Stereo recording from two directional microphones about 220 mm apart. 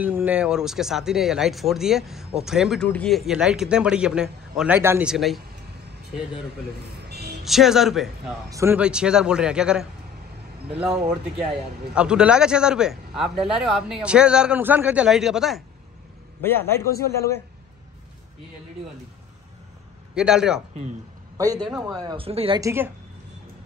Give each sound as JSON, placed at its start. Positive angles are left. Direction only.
{"t": 0.0, "sound": "speech", "side_deg": -5}
{"t": 7.1, "sound": "a sound", "side_deg": -45}
{"t": 7.4, "sound": "speech", "side_deg": 0}
{"t": 8.5, "sound": "speech", "side_deg": -10}
{"t": 16.4, "sound": "a man's voice", "side_deg": 10}
{"t": 20.2, "sound": "speech", "side_deg": -5}
{"t": 21.6, "sound": "speech", "side_deg": 0}
{"t": 21.9, "sound": "speech", "side_deg": -20}
{"t": 22.6, "sound": "speech", "side_deg": -10}